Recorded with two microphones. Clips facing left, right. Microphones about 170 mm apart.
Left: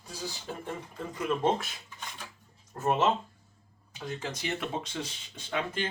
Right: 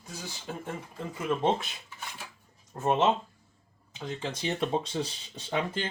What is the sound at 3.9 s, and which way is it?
Speech, 25° right (ahead or behind).